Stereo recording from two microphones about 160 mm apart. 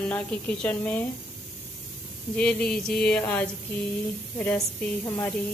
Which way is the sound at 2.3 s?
10° left (ahead or behind).